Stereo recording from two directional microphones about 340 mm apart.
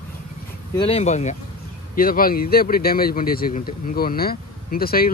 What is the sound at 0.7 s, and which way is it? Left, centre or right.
Speech, centre.